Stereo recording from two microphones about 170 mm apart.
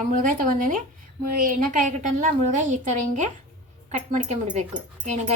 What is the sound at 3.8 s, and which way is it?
Speech, 45° right (ahead or behind).